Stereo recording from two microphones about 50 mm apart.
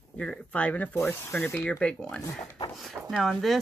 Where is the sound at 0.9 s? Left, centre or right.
Left.